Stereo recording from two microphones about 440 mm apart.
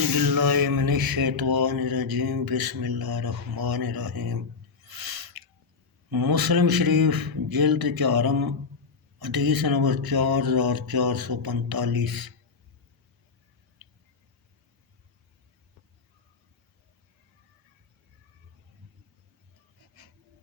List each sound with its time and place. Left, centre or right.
0.2 s mantra: right
4.9 s a sound: right
6.1 s mantra: right